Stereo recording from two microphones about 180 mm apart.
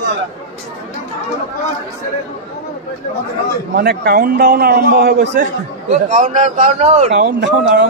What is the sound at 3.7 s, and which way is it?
A man's voice, 65° right (ahead or behind).